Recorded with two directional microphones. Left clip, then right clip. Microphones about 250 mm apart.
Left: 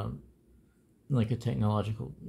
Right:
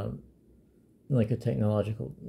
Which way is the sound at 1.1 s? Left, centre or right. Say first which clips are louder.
Right 4 dB; centre.